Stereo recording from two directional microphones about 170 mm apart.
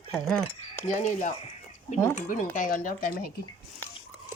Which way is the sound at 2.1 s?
50° left (ahead or behind).